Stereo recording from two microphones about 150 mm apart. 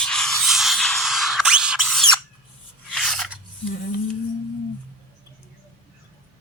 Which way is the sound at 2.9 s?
Centre (ahead or behind).